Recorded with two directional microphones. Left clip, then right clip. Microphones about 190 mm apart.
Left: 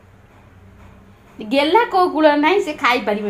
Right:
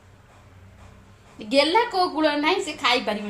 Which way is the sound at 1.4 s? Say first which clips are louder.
Left 4 dB; 10° left (ahead or behind).